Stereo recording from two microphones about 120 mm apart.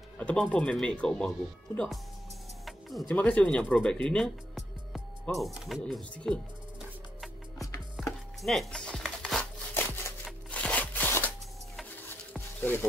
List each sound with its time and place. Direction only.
0.2 s speech: 10° left (ahead or behind)
2.6 s music: centre (ahead or behind)
3.2 s speech: 10° left (ahead or behind)
8.0 s music: centre (ahead or behind)
9.8 s a sound: 20° left (ahead or behind)
10.5 s scissors: 10° left (ahead or behind)
12.4 s music: 15° left (ahead or behind)